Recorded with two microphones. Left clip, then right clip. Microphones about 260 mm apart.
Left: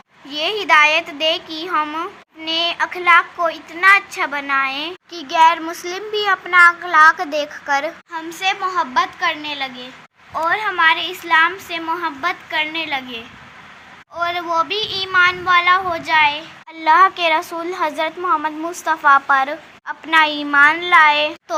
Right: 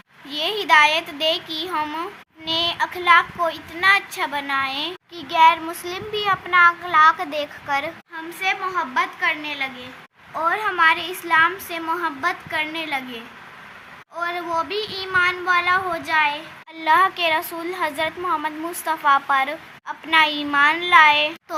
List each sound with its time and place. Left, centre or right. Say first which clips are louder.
0.3 s speech: left 2 dB; centre
8.1 s speech: left 3 dB; centre
10.3 s speech: left 3 dB; centre